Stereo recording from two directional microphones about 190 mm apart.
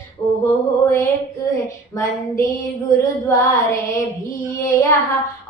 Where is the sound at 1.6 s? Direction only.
15° left (ahead or behind).